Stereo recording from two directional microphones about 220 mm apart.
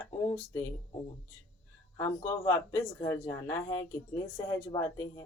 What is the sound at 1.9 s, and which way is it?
Speech, 10° left (ahead or behind).